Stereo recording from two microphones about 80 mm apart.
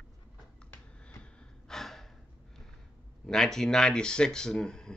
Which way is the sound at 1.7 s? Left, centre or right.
Centre.